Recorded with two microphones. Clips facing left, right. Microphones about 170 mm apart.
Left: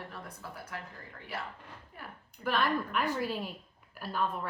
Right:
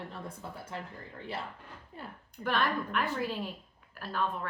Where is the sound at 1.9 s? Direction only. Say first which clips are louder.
Right 4 dB; 25° right (ahead or behind).